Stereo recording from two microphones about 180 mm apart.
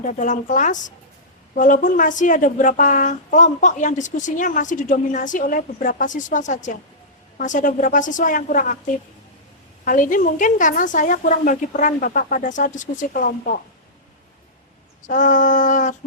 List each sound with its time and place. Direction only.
0.0 s speech: 45° left (ahead or behind)
9.8 s speech: 50° left (ahead or behind)
15.0 s speech: 45° left (ahead or behind)